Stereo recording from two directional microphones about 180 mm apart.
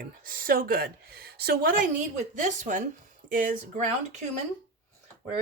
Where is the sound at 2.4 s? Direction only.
45° right (ahead or behind).